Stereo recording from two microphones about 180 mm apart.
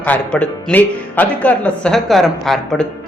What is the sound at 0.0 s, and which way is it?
Speech, 10° left (ahead or behind).